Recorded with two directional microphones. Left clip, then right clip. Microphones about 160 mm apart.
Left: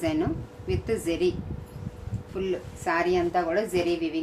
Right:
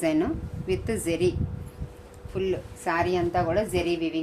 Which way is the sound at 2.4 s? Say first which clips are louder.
Right 1 dB; 40° right (ahead or behind).